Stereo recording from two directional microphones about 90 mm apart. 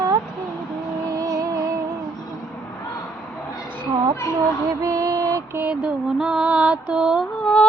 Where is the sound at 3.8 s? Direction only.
45° right (ahead or behind).